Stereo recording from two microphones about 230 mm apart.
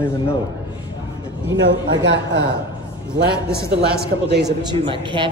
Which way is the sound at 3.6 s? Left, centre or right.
Right.